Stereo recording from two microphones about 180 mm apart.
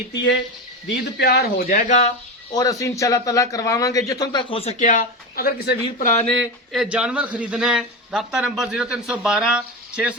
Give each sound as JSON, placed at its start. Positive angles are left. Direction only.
{"t": 0.9, "sound": "speech", "side_deg": 65}
{"t": 2.5, "sound": "speech", "side_deg": 20}
{"t": 4.9, "sound": "speech", "side_deg": 50}
{"t": 6.7, "sound": "speech", "side_deg": -5}